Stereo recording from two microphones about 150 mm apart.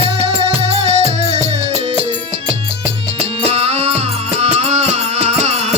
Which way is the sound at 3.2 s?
45° right (ahead or behind).